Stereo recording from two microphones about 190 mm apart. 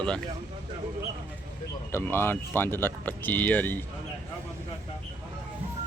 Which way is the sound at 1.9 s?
10° left (ahead or behind).